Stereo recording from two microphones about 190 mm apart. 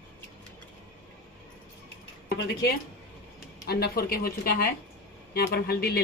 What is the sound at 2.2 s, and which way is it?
A man's voice, 60° left (ahead or behind).